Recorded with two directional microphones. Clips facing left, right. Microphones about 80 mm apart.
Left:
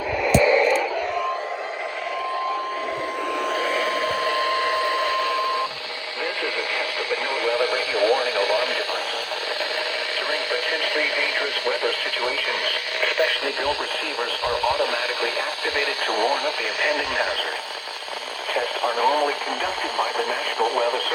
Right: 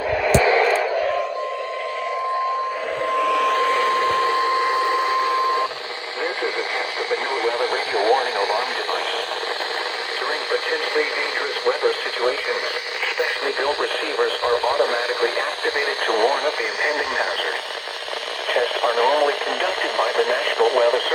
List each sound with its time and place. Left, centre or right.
3.4 s radio: right
4.4 s radio: right
7.1 s radio: right
10.5 s radio: right
18.5 s radio: right